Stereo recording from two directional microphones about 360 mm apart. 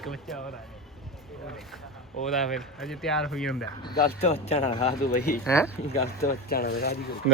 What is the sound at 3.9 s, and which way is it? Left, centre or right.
Speech, centre.